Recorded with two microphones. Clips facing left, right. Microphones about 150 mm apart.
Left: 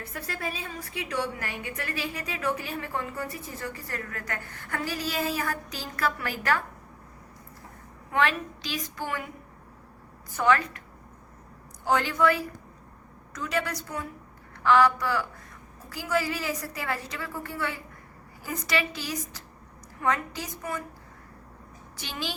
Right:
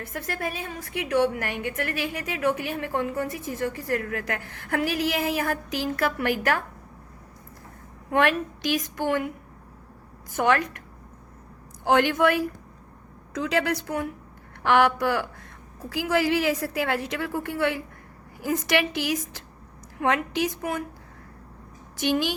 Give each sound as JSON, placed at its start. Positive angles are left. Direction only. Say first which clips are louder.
{"t": 0.0, "sound": "a woman's voice", "louder": "right 4 dB", "side_deg": -50}
{"t": 3.6, "sound": "a woman's voice", "louder": "right 11 dB", "side_deg": -75}
{"t": 5.7, "sound": "a woman's voice", "louder": "right 6 dB", "side_deg": -65}
{"t": 8.1, "sound": "a woman's voice", "louder": "right 4 dB", "side_deg": -55}
{"t": 10.4, "sound": "a woman's voice", "louder": "right 1 dB", "side_deg": -65}
{"t": 11.9, "sound": "a woman's voice", "louder": "right 5 dB", "side_deg": -75}
{"t": 12.1, "sound": "a woman's voice", "louder": "right 2 dB", "side_deg": -60}
{"t": 13.4, "sound": "a woman's voice", "louder": "right 5 dB", "side_deg": -90}
{"t": 15.9, "sound": "a woman's voice", "louder": "right 5 dB", "side_deg": -90}
{"t": 22.0, "sound": "a woman's voice", "louder": "right 11 dB", "side_deg": -60}